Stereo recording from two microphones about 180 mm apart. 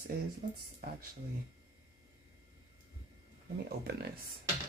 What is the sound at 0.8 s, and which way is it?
Speech, 55° right (ahead or behind).